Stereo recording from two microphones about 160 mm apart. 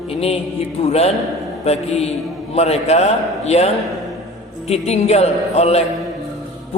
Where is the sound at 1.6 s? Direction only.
40° left (ahead or behind).